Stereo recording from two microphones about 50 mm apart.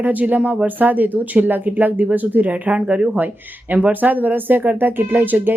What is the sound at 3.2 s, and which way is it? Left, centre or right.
Speech, right.